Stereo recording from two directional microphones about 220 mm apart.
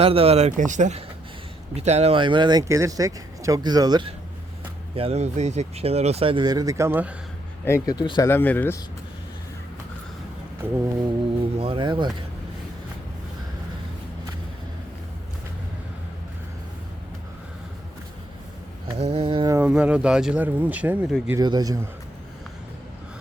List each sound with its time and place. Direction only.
0.0 s speech: 25° right (ahead or behind); by 7.1 s 10° right (ahead or behind)
7.6 s speech: 15° left (ahead or behind)
10.6 s speech: 10° right (ahead or behind)
11.5 s speech: 25° right (ahead or behind)
18.9 s speech: 30° right (ahead or behind)
19.5 s speech: 5° right (ahead or behind)